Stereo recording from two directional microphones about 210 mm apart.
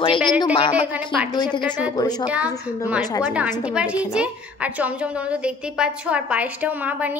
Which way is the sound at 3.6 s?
5° right (ahead or behind).